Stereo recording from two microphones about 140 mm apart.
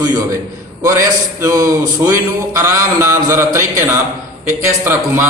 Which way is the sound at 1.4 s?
25° right (ahead or behind).